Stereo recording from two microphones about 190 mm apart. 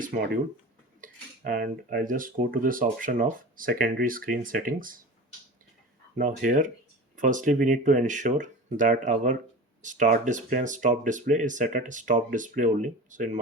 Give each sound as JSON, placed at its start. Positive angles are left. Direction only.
{"t": 0.0, "sound": "speech", "side_deg": -45}
{"t": 6.1, "sound": "speech", "side_deg": -45}